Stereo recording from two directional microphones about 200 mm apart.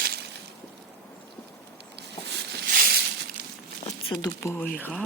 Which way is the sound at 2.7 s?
50° right (ahead or behind).